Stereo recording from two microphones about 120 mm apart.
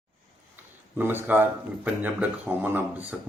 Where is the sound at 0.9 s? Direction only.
15° right (ahead or behind).